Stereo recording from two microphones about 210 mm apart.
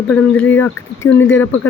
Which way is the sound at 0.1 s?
10° left (ahead or behind).